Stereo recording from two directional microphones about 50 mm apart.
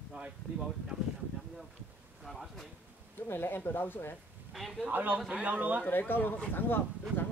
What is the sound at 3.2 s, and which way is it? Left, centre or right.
Speech, left.